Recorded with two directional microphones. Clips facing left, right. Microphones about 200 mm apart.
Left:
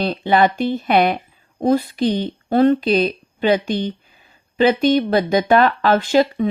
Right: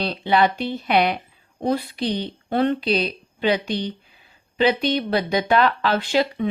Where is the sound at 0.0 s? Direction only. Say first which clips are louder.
Left 3 dB; 50° left (ahead or behind).